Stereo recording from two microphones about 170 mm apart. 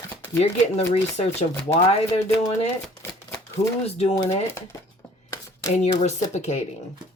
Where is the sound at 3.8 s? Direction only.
35° left (ahead or behind).